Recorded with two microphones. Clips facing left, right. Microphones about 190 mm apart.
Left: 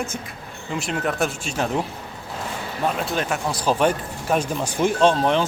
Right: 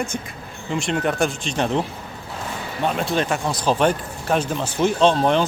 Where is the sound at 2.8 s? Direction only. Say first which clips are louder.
Right 2 dB; centre (ahead or behind).